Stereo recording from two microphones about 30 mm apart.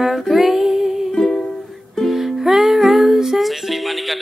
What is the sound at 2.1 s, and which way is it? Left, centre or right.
Music, centre.